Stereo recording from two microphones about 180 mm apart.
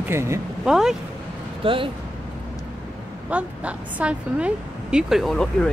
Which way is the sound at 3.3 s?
10° right (ahead or behind).